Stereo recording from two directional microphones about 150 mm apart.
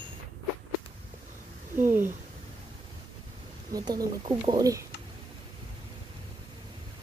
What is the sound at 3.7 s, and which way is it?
Speech, 25° right (ahead or behind).